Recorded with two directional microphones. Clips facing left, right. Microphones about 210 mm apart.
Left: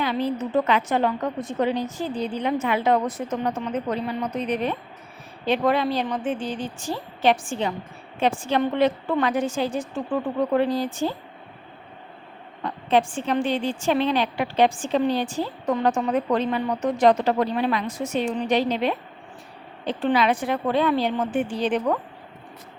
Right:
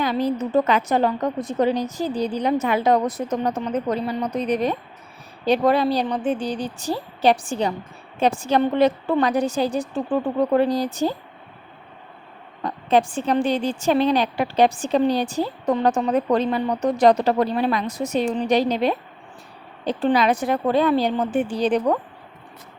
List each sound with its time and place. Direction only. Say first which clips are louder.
0.0 s a woman's voice: right 3 dB; 40° right (ahead or behind)
12.6 s a woman's voice: right 2 dB; 40° right (ahead or behind)